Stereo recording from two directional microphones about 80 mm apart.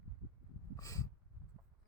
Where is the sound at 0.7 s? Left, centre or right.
Left.